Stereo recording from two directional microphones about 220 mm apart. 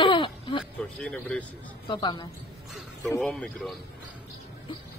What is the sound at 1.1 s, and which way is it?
Speech, 5° left (ahead or behind).